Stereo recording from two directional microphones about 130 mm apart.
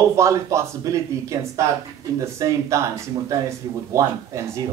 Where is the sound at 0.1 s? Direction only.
25° right (ahead or behind).